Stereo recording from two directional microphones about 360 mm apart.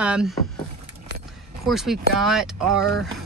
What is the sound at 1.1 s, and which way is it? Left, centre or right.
Keys jangling, right.